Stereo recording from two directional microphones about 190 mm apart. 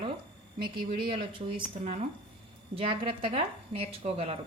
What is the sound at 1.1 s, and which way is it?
Speech, 25° right (ahead or behind).